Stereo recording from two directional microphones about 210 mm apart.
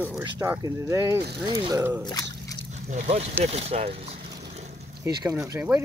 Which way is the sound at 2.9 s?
35° right (ahead or behind).